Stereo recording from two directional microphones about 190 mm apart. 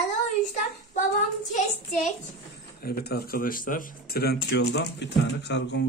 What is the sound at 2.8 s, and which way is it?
Speech, 55° left (ahead or behind).